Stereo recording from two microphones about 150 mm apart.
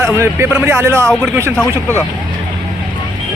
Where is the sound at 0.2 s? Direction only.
15° right (ahead or behind).